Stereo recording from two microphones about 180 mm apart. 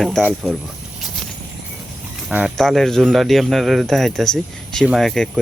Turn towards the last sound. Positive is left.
turn(degrees=0)  # may be behind; listen again after turning